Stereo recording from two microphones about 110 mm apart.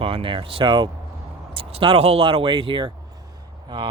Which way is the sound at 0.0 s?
55° right (ahead or behind).